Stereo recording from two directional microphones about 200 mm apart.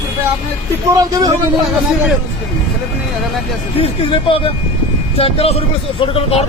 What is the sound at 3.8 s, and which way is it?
Speech, 25° left (ahead or behind).